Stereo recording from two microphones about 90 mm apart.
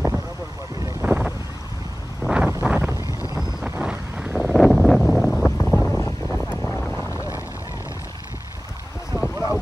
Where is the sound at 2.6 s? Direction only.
20° right (ahead or behind).